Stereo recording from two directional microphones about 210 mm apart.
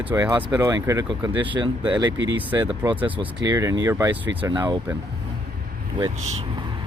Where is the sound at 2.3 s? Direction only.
10° right (ahead or behind).